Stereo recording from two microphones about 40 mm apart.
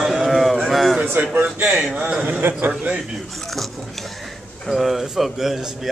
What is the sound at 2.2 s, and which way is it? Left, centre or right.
Speech, right.